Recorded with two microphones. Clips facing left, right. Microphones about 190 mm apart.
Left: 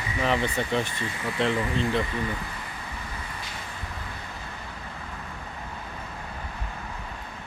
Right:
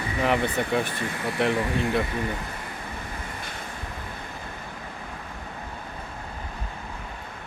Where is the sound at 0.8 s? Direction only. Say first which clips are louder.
Right 3 dB; 55° right (ahead or behind).